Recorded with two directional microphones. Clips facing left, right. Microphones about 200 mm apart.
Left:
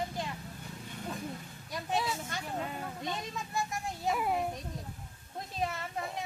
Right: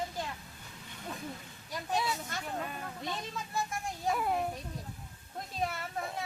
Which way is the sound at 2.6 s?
20° left (ahead or behind).